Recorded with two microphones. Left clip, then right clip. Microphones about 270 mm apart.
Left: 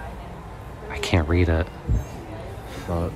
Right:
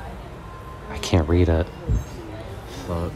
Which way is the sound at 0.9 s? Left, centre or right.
Centre.